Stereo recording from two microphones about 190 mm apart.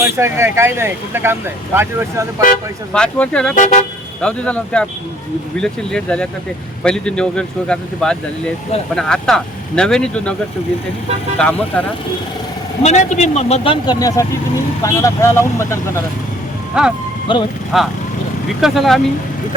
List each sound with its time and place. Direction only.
0.0 s speech: 15° right (ahead or behind)
2.9 s speech: 5° left (ahead or behind)
3.5 s a man's voice: 40° left (ahead or behind)
4.2 s speech: 5° left (ahead or behind)
11.3 s speech: 5° left (ahead or behind)
12.8 s a man's voice: 35° left (ahead or behind)
13.8 s speech: 20° left (ahead or behind)
16.7 s speech: 5° right (ahead or behind)
17.3 s speech: 25° left (ahead or behind)
17.7 s speech: centre (ahead or behind)